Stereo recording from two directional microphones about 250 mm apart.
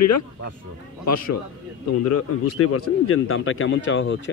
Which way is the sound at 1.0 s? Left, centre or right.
Left.